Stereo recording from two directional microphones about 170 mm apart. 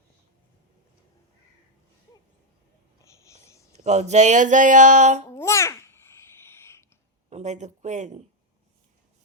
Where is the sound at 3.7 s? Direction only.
40° right (ahead or behind).